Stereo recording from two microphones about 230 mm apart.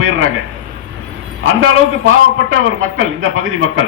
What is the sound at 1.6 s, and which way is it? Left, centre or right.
A man's voice, right.